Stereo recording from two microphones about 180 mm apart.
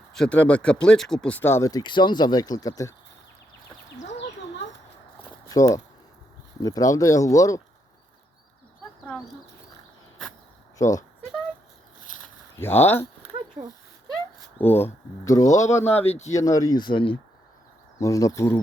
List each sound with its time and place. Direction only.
0.1 s speech: 5° left (ahead or behind)
5.5 s speech: 20° left (ahead or behind)
10.8 s speech: 15° left (ahead or behind)
12.5 s speech: 10° left (ahead or behind)
13.6 s speech: 25° right (ahead or behind)
14.6 s speech: 10° left (ahead or behind)